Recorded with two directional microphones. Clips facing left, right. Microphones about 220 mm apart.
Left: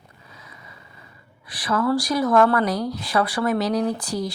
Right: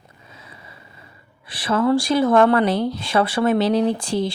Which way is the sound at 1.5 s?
25° right (ahead or behind).